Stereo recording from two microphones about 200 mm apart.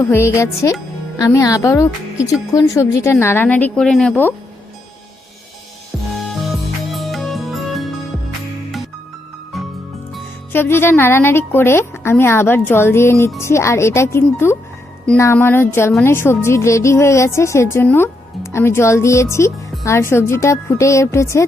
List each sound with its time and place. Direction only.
0.0 s a woman's voice: 10° left (ahead or behind)
6.9 s music: centre (ahead or behind)
9.5 s music: centre (ahead or behind)
10.5 s a woman's voice: 10° left (ahead or behind)